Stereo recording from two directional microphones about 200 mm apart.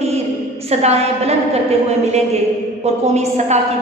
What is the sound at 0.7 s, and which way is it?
A woman's voice, 30° right (ahead or behind).